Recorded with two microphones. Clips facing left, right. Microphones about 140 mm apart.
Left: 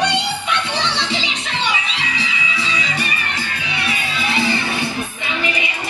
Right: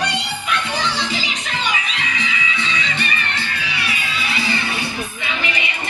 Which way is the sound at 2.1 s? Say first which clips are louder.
Even; 35° left (ahead or behind).